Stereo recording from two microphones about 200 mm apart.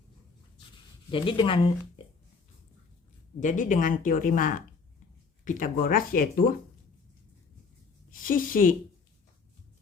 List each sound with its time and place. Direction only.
1.1 s speech: 25° left (ahead or behind)
3.4 s speech: 40° left (ahead or behind)
8.1 s speech: 45° left (ahead or behind)